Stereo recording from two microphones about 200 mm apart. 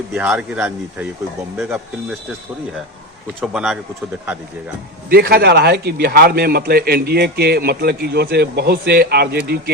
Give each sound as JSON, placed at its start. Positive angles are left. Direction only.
{"t": 0.1, "sound": "speech", "side_deg": -5}
{"t": 3.4, "sound": "speech", "side_deg": -5}
{"t": 5.0, "sound": "a man's voice", "side_deg": -50}